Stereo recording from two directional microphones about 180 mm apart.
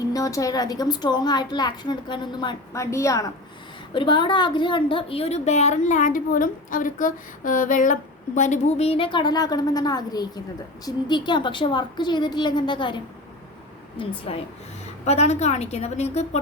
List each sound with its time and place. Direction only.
0.1 s a woman's voice: 20° left (ahead or behind); by 16.4 s 35° left (ahead or behind)